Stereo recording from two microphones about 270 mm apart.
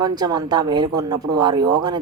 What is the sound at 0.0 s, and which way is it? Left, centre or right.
Speech, centre.